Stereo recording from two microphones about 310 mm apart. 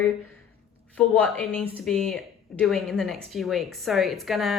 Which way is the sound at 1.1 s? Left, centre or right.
Centre.